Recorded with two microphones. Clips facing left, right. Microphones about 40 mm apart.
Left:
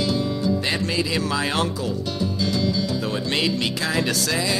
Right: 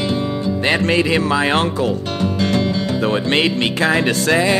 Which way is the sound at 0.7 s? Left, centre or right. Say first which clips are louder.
Right 8 dB; right.